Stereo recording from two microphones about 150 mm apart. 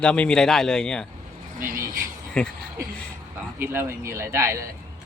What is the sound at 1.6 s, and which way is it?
Speech, 65° right (ahead or behind).